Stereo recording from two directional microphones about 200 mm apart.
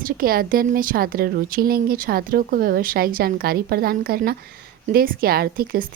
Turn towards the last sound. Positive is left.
turn(degrees=-45)  # may be behind; listen again after turning